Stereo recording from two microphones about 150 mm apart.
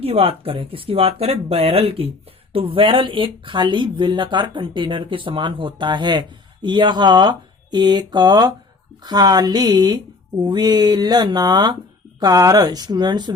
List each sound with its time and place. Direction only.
0.0 s speech: 40° right (ahead or behind)